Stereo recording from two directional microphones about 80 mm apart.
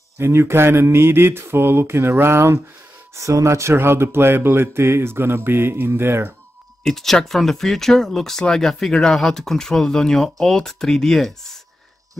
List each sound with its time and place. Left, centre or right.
0.2 s speech: right
6.8 s speech: centre